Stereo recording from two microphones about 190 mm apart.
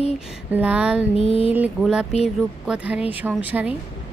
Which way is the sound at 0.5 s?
5° right (ahead or behind).